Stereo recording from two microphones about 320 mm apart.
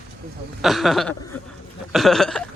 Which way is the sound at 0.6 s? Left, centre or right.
Centre.